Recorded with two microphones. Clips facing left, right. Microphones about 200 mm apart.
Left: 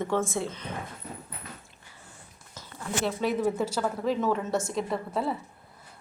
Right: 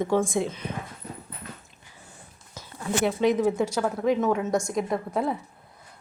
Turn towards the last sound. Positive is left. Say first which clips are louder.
# right 3 dB
turn(degrees=-15)  # may be behind; listen again after turning